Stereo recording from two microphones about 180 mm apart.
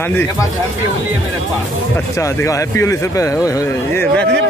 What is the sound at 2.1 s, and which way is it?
Speech, 15° left (ahead or behind).